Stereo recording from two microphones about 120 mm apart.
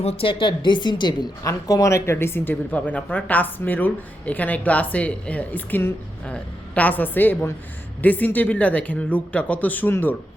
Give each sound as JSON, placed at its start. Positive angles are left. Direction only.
{"t": 0.0, "sound": "speech", "side_deg": 55}
{"t": 1.5, "sound": "speech", "side_deg": 30}